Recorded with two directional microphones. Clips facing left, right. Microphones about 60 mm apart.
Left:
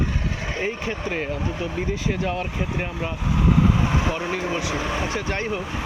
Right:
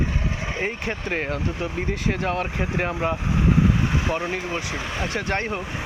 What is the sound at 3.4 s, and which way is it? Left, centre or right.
Vehicle, right.